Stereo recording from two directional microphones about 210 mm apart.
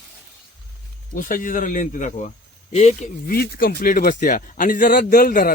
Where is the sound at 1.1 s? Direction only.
40° left (ahead or behind).